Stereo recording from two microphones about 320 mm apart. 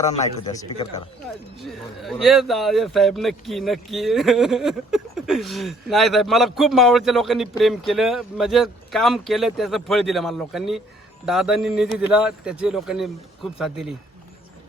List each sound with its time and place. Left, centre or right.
0.1 s speech: centre
1.6 s speech: centre